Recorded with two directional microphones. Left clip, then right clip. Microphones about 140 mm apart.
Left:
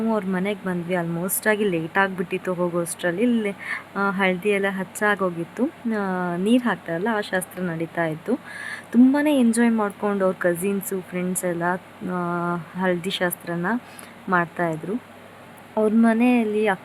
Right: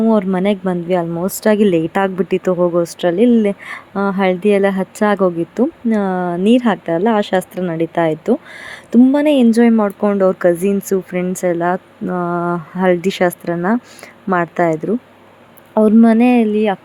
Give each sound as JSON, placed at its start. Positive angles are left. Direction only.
{"t": 0.1, "sound": "speech", "side_deg": -40}
{"t": 1.1, "sound": "a woman's voice", "side_deg": -10}
{"t": 1.5, "sound": "speech", "side_deg": -40}
{"t": 2.6, "sound": "speech", "side_deg": -25}
{"t": 3.0, "sound": "speech", "side_deg": -40}
{"t": 16.0, "sound": "speech", "side_deg": -40}